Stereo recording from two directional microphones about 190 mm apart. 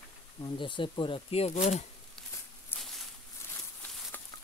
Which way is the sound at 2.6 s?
Centre (ahead or behind).